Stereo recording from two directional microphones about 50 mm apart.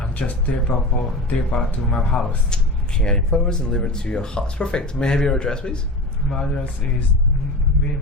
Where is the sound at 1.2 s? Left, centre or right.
Left.